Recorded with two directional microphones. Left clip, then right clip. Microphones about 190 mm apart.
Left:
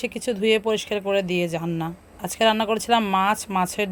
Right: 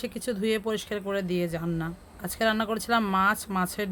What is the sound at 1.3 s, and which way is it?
Speech, 25° right (ahead or behind).